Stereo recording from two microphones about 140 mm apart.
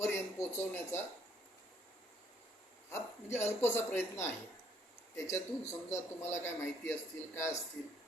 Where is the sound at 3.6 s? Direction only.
15° left (ahead or behind).